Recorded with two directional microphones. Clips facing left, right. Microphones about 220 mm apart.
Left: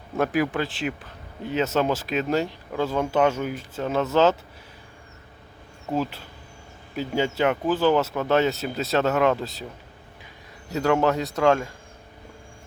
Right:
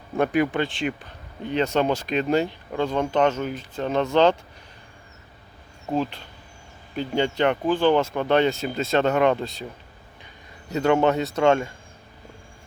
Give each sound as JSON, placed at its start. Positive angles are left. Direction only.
{"t": 0.2, "sound": "speech", "side_deg": 0}
{"t": 5.9, "sound": "speech", "side_deg": 5}
{"t": 10.7, "sound": "speech", "side_deg": 0}